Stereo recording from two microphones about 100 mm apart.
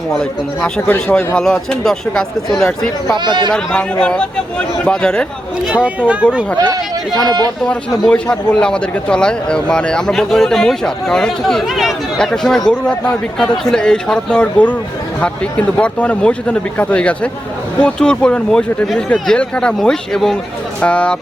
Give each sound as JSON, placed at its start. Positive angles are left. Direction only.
{"t": 0.1, "sound": "a man's voice", "side_deg": 5}
{"t": 3.2, "sound": "speech", "side_deg": -50}
{"t": 3.5, "sound": "a man's voice", "side_deg": 5}
{"t": 5.7, "sound": "speech", "side_deg": -15}
{"t": 7.7, "sound": "a man's voice", "side_deg": 10}